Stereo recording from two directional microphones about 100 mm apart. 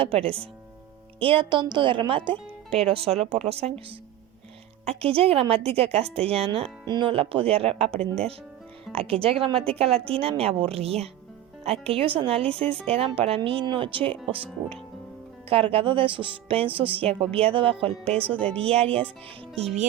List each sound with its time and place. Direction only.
0.0 s a woman's voice: 70° right (ahead or behind)
6.8 s speech: 45° right (ahead or behind)
7.1 s speech: 65° right (ahead or behind); by 8.0 s 85° right
8.9 s speech: 75° right (ahead or behind)
12.6 s speech: 15° left (ahead or behind)
13.1 s speech: 75° right (ahead or behind)
17.1 s speech: 75° right (ahead or behind)
18.3 s speech: 10° left (ahead or behind)
18.6 s a woman's voice: 80° right
19.5 s music: 90° right